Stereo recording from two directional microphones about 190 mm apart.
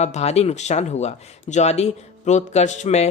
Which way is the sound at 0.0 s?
35° left (ahead or behind).